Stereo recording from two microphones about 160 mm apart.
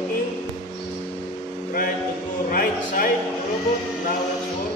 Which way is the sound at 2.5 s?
60° left (ahead or behind).